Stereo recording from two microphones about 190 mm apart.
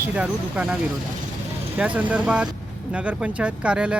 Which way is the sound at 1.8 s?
5° right (ahead or behind).